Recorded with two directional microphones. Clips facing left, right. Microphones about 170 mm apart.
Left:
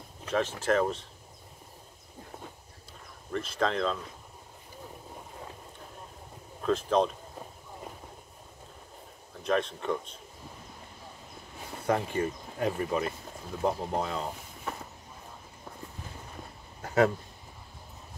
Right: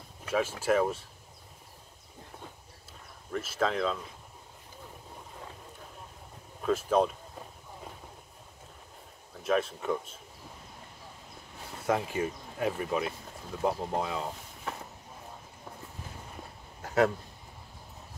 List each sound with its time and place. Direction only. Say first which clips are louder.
0.3 s speech: even; 10° right (ahead or behind)
3.3 s speech: left 1 dB; 5° right (ahead or behind)
6.6 s speech: even; 5° right (ahead or behind)
9.4 s speech: even; 5° right (ahead or behind)
11.8 s speech: left 1 dB; 5° right (ahead or behind)
16.8 s a sound: left 1 dB; centre (ahead or behind)